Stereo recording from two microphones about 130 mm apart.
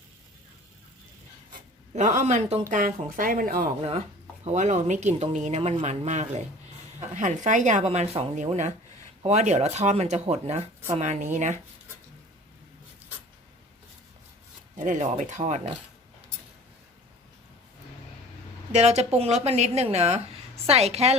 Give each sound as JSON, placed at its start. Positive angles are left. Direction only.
{"t": 2.0, "sound": "speech", "side_deg": -70}
{"t": 2.6, "sound": "speech", "side_deg": -90}
{"t": 3.8, "sound": "a woman's voice", "side_deg": -50}
{"t": 4.4, "sound": "a woman's voice", "side_deg": -65}
{"t": 8.4, "sound": "a woman's voice", "side_deg": -65}
{"t": 14.8, "sound": "a woman's voice", "side_deg": -75}
{"t": 18.7, "sound": "a woman's voice", "side_deg": -60}